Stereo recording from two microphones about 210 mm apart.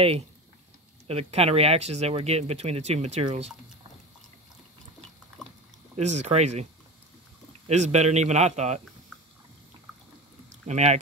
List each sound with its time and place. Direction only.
1.0 s speech: 30° right (ahead or behind)
5.9 s a man's voice: 35° right (ahead or behind)
10.5 s speech: 30° right (ahead or behind)